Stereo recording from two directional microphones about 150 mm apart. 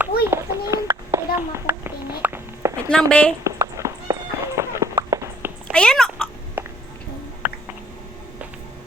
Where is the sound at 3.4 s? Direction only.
20° right (ahead or behind).